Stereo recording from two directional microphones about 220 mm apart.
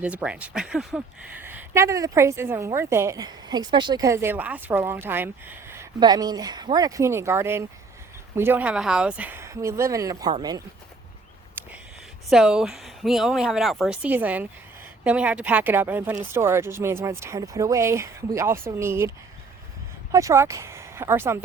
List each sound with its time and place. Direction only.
0.0 s speech: 5° right (ahead or behind)
12.3 s speech: centre (ahead or behind)